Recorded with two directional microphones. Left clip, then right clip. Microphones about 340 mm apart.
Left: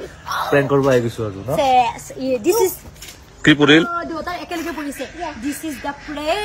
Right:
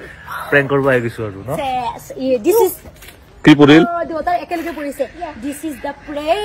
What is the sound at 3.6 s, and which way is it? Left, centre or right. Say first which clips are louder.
Speech: right 4 dB; centre.